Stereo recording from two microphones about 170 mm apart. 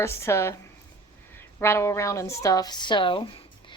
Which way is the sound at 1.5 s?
15° left (ahead or behind).